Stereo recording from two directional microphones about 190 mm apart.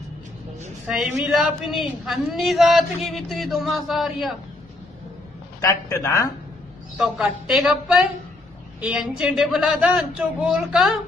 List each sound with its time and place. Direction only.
0.8 s a woman's voice: 5° right (ahead or behind)
5.6 s a man's voice: 15° left (ahead or behind)
7.0 s a woman's voice: 5° right (ahead or behind)